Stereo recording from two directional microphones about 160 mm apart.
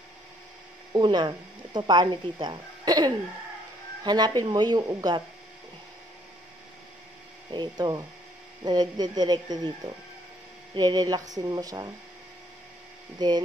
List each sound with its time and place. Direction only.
0.9 s speech: 25° right (ahead or behind)
7.5 s speech: 25° right (ahead or behind)
10.7 s speech: 25° right (ahead or behind)
13.2 s speech: 25° right (ahead or behind)